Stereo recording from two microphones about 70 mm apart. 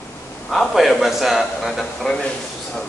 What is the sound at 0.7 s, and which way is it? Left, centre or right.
A man's voice, centre.